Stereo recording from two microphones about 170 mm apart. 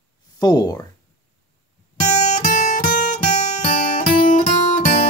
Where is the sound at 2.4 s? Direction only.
50° left (ahead or behind).